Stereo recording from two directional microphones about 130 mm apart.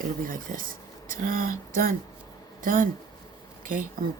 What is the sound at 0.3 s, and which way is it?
Speech, 90° right.